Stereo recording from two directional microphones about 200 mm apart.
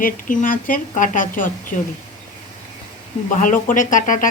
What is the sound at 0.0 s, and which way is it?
A woman's voice, 45° left (ahead or behind).